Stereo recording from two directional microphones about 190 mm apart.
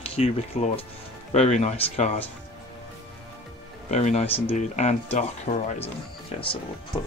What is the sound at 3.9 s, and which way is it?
Speech, 35° left (ahead or behind).